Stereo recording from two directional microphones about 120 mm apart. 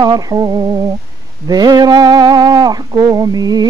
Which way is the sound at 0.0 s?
35° right (ahead or behind).